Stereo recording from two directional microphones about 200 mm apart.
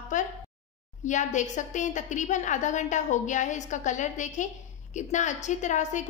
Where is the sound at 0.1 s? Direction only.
40° left (ahead or behind).